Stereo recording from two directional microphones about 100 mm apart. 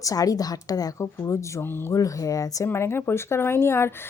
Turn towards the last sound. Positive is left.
turn(degrees=25)  # may be behind; listen again after turning